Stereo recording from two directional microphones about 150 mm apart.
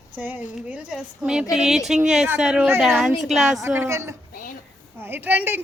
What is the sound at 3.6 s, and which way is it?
Speech, 15° right (ahead or behind).